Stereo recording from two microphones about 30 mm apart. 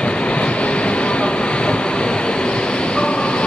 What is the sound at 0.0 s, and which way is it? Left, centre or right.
Train, left.